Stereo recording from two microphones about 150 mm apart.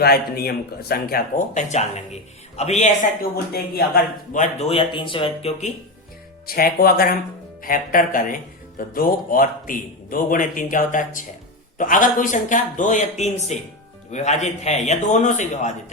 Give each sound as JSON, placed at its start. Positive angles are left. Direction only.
{"t": 0.0, "sound": "a man's voice", "side_deg": 90}
{"t": 1.5, "sound": "a man's voice", "side_deg": 50}
{"t": 3.2, "sound": "speech", "side_deg": 90}
{"t": 4.4, "sound": "speech", "side_deg": 45}
{"t": 6.5, "sound": "speech", "side_deg": 85}
{"t": 7.6, "sound": "a man's voice", "side_deg": 65}